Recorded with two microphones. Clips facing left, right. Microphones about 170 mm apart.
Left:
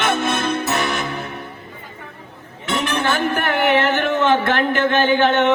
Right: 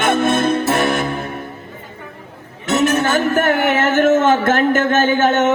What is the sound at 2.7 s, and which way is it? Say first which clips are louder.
Music: right 5 dB; 45° right (ahead or behind).